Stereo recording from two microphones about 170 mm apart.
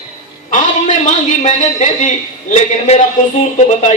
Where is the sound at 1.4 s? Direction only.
50° left (ahead or behind).